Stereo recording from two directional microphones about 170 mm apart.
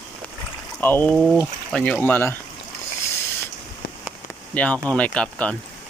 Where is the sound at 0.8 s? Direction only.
10° left (ahead or behind).